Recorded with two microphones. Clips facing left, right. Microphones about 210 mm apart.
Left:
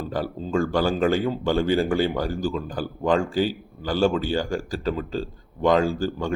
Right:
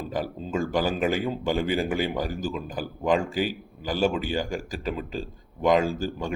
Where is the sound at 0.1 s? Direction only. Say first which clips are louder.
Left 4 dB; 20° right (ahead or behind).